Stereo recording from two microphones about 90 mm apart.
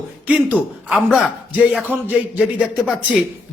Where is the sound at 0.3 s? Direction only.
15° right (ahead or behind).